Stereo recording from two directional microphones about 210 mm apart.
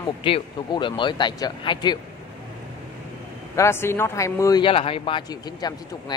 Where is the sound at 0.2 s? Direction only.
25° left (ahead or behind).